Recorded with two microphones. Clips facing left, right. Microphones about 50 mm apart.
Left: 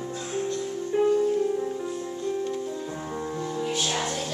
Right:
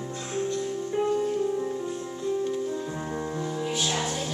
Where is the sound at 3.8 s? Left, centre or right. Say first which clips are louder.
Right 1 dB; centre.